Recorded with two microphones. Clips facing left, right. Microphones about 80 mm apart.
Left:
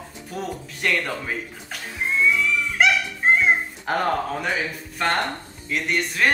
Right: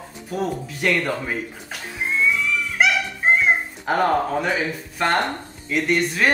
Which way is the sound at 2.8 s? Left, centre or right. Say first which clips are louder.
Even; centre.